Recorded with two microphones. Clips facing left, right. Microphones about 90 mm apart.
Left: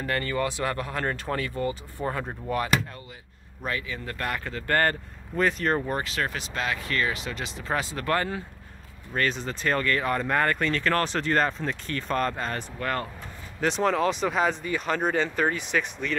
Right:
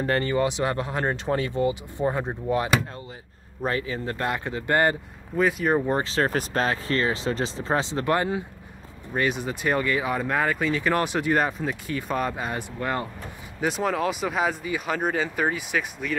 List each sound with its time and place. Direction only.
0.0 s speech: 30° right (ahead or behind)
3.6 s speech: 35° right (ahead or behind); by 4.9 s 15° right (ahead or behind)
5.3 s speech: 5° right (ahead or behind)
5.9 s speech: 25° right (ahead or behind); by 16.2 s 10° right (ahead or behind)